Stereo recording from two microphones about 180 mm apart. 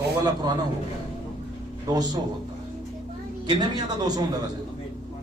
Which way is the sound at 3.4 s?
20° right (ahead or behind).